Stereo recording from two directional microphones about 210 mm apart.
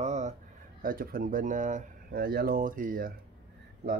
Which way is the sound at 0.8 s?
40° right (ahead or behind).